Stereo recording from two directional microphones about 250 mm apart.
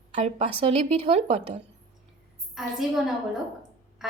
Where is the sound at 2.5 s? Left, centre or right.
Centre.